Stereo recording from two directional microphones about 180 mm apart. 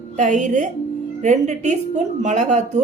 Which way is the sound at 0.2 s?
45° right (ahead or behind).